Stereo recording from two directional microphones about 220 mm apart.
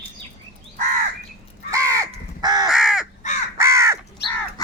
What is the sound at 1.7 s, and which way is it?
Crow, 15° right (ahead or behind).